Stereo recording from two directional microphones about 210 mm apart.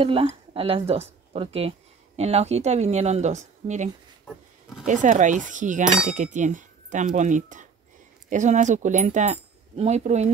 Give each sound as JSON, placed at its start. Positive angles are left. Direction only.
{"t": 0.0, "sound": "speech", "side_deg": -25}